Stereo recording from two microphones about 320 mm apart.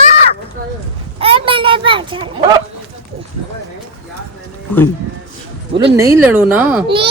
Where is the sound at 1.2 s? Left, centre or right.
Centre.